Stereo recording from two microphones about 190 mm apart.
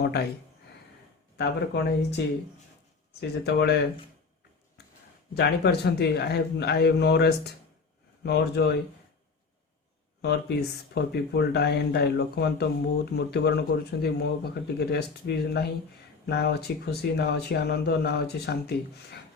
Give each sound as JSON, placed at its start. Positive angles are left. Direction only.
{"t": 0.0, "sound": "a sound", "side_deg": 60}
{"t": 1.4, "sound": "speech", "side_deg": 60}
{"t": 5.3, "sound": "speech", "side_deg": 60}
{"t": 10.2, "sound": "speech", "side_deg": 60}